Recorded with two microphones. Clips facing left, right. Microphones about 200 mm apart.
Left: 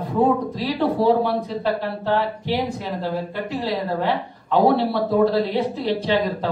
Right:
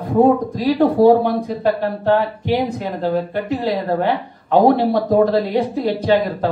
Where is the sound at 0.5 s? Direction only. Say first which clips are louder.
Right 7 dB; 45° right (ahead or behind).